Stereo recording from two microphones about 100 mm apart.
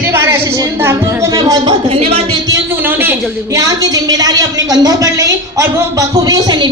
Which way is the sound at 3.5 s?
35° right (ahead or behind).